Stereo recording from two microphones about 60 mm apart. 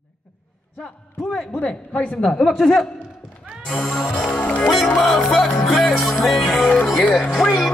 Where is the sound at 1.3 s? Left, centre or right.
Centre.